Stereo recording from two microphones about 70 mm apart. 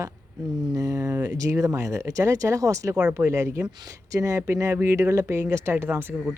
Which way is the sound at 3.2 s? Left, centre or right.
Right.